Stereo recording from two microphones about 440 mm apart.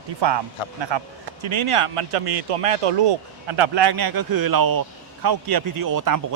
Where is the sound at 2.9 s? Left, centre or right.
Right.